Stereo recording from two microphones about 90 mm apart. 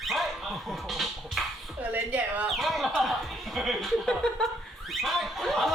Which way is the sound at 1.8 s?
15° right (ahead or behind).